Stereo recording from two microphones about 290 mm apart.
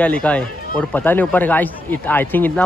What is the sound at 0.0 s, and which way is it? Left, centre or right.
Speech, centre.